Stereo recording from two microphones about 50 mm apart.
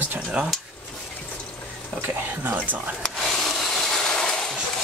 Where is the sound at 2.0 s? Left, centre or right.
Right.